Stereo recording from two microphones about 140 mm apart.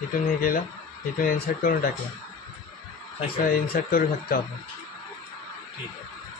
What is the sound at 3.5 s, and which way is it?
Speech, 90° left.